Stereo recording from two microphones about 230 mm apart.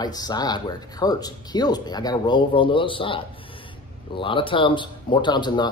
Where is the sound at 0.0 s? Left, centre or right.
Centre.